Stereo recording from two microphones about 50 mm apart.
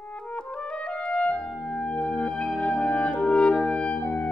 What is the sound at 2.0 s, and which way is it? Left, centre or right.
Music, left.